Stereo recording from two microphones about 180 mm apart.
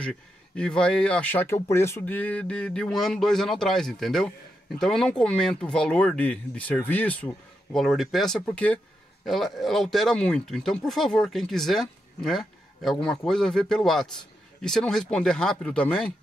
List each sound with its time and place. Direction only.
0.0 s speech: 5° left (ahead or behind)